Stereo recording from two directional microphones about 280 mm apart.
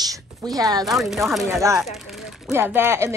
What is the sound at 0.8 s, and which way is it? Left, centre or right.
Speech, centre.